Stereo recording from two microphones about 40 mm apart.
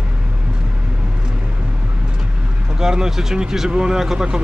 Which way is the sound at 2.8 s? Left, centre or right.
Centre.